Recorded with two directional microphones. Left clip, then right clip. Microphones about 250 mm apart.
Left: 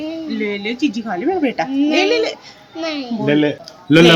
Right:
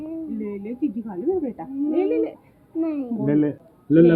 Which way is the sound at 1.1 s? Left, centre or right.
Left.